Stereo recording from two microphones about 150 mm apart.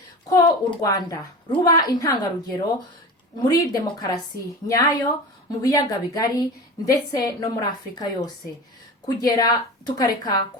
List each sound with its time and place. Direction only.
0.3 s a woman's voice: 25° left (ahead or behind)